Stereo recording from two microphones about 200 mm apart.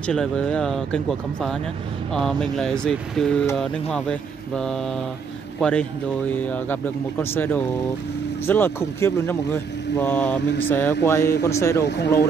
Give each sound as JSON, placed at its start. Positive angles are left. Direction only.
{"t": 0.0, "sound": "speech", "side_deg": 5}
{"t": 11.8, "sound": "speech", "side_deg": 55}